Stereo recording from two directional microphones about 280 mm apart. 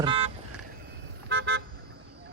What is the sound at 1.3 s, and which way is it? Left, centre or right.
Toot, right.